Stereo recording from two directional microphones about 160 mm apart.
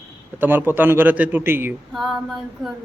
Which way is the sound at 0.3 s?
10° right (ahead or behind).